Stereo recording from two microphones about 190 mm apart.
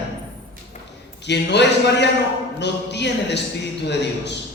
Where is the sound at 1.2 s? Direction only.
65° left (ahead or behind).